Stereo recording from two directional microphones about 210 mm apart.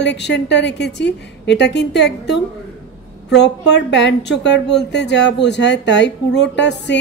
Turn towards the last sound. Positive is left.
turn(degrees=55)  # may be behind; listen again after turning